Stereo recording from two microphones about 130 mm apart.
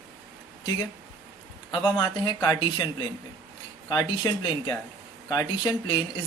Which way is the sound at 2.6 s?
35° left (ahead or behind).